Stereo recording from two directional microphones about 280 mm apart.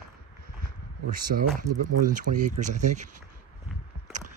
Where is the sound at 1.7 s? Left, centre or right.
Right.